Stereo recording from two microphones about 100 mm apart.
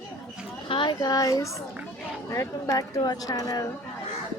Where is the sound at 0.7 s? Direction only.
55° left (ahead or behind).